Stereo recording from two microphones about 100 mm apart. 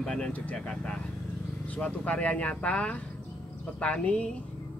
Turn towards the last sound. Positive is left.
turn(degrees=10)  # may be behind; listen again after turning